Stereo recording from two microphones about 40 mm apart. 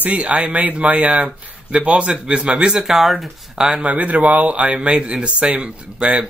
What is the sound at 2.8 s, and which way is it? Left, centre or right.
Speech, centre.